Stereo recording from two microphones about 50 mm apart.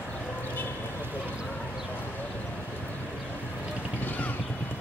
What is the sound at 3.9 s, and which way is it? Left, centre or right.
Vehicle, left.